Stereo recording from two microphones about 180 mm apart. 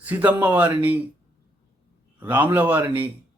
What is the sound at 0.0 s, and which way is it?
Speech, 10° right (ahead or behind).